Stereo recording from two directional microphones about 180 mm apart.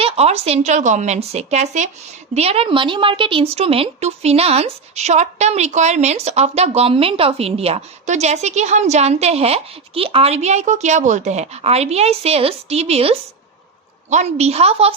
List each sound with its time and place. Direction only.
0.0 s a woman's voice: 35° right (ahead or behind)